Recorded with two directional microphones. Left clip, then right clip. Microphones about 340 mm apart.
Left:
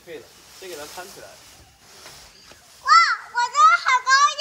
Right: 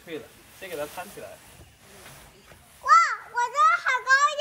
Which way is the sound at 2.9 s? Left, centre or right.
Centre.